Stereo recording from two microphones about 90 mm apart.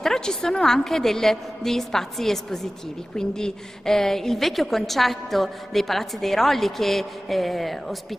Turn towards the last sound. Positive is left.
turn(degrees=0)  # may be behind; listen again after turning